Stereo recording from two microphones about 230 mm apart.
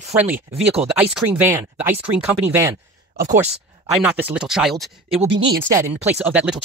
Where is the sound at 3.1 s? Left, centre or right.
Right.